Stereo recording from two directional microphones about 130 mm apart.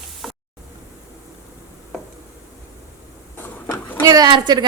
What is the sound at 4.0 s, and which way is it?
Speech, 30° right (ahead or behind).